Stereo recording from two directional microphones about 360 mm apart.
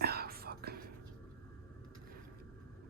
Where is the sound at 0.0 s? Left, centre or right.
Right.